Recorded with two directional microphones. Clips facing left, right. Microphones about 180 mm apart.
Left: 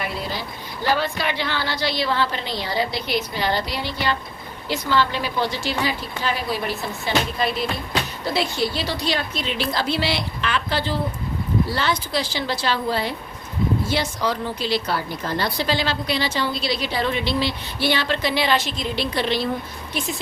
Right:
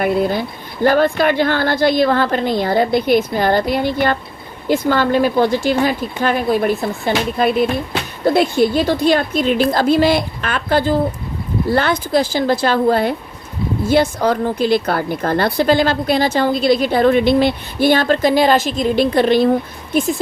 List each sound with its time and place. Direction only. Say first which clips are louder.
0.0 s a woman's voice: right 12 dB; 50° right (ahead or behind)